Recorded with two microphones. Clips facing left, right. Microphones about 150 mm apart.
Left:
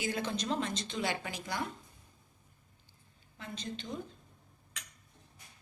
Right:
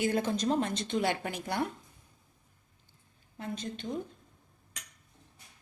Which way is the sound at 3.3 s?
50° right (ahead or behind).